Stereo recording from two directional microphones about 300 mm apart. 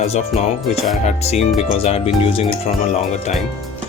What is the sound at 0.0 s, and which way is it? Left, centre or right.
Speech, left.